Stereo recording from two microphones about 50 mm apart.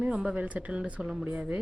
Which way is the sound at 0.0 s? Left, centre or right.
Centre.